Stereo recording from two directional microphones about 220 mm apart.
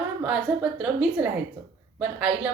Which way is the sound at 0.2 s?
5° right (ahead or behind).